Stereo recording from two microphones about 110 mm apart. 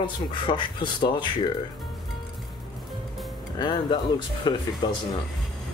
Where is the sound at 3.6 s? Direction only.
45° left (ahead or behind).